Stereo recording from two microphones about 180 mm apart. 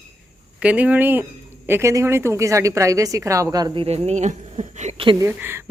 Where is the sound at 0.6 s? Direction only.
5° right (ahead or behind); by 5.1 s 40° right (ahead or behind).